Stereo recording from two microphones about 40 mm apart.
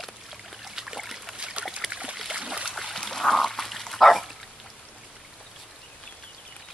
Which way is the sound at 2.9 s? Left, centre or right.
Centre.